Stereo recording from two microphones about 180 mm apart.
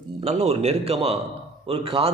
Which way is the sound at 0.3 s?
35° right (ahead or behind).